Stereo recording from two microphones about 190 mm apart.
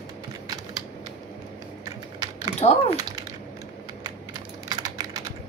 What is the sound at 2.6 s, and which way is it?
Speech, 30° left (ahead or behind).